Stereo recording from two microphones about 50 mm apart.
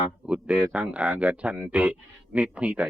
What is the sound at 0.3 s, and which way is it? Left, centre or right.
Speech, right.